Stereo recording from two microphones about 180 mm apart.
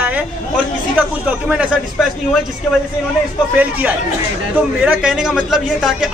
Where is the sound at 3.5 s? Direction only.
10° right (ahead or behind).